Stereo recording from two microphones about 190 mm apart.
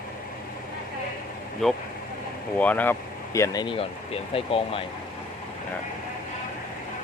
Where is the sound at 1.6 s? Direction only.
Centre (ahead or behind); by 4.8 s 30° left (ahead or behind).